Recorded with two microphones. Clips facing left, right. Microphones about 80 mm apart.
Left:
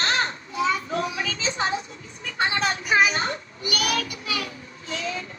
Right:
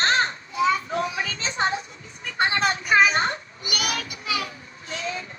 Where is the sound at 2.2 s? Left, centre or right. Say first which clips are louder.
Right 2 dB; right.